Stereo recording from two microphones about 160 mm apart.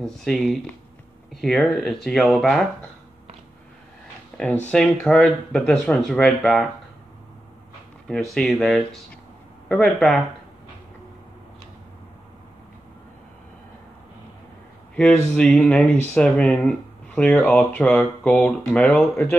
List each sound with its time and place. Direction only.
0.0 s speech: 5° left (ahead or behind)
4.6 s speech: 5° left (ahead or behind)
8.1 s speech: 5° left (ahead or behind)
15.3 s speech: 5° left (ahead or behind)